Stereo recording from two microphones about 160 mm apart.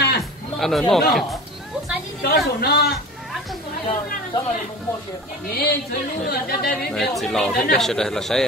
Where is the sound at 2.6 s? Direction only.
70° left (ahead or behind).